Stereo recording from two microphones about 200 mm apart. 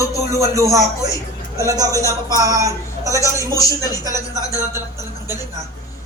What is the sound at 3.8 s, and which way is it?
Speech, 15° left (ahead or behind).